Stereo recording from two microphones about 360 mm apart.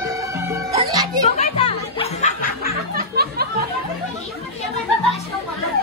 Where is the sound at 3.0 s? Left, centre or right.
Right.